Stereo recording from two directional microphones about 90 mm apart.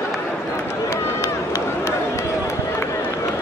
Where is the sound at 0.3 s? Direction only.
30° left (ahead or behind).